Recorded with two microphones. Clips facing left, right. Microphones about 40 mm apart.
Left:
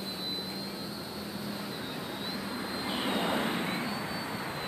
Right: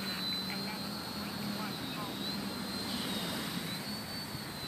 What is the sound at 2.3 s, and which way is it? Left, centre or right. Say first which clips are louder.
Vehicle: left 4 dB; centre.